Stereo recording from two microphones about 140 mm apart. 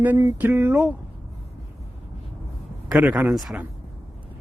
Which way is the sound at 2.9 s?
10° right (ahead or behind).